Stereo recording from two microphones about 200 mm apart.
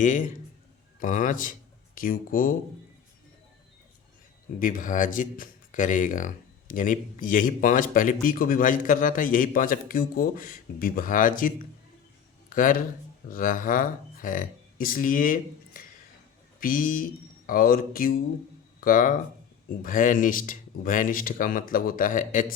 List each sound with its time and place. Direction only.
0.0 s a man's voice: 40° left (ahead or behind)
4.6 s a man's voice: 45° left (ahead or behind)